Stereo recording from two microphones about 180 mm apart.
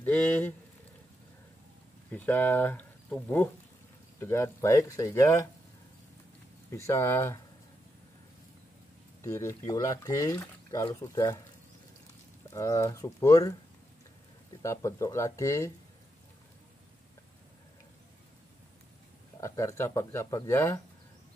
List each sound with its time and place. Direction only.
0.0 s speech: 10° left (ahead or behind)
2.0 s speech: 10° left (ahead or behind)
6.9 s speech: 15° left (ahead or behind)
9.2 s speech: 15° left (ahead or behind)
12.4 s speech: 15° left (ahead or behind)
14.6 s speech: 15° left (ahead or behind)
19.4 s speech: 15° left (ahead or behind)